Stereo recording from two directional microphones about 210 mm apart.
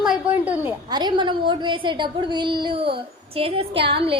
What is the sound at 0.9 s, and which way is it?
A woman's voice, 20° right (ahead or behind).